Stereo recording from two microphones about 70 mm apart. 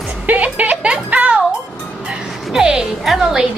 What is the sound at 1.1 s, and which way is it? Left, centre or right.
Music, centre.